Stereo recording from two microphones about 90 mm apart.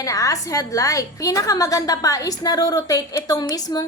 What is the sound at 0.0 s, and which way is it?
A woman's voice, 40° left (ahead or behind).